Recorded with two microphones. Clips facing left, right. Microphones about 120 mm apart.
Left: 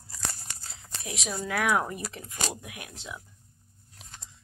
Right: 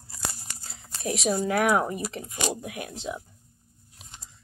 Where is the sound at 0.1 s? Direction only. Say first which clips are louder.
Right 2 dB; 10° right (ahead or behind).